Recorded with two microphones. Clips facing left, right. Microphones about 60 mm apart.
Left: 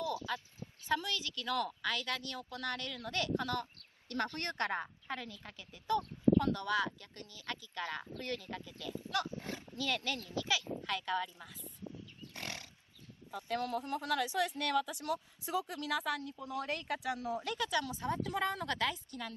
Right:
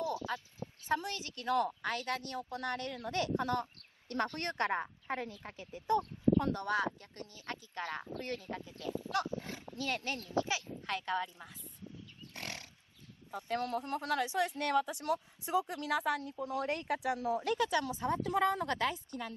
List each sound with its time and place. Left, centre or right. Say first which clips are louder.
0.0 s a woman's voice: right 1 dB; right
11.6 s a sound: left 2 dB; left
12.4 s wild animals: even; right
13.6 s a woman's voice: right 1 dB; right